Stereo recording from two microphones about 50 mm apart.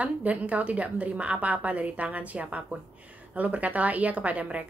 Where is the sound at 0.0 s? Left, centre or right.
Right.